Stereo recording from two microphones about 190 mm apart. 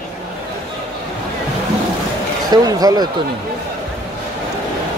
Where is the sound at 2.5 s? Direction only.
20° right (ahead or behind).